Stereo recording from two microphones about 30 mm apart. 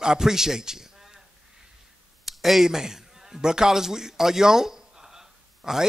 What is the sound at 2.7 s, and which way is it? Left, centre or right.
A man's voice, centre.